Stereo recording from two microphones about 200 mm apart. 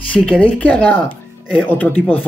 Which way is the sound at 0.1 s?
5° left (ahead or behind).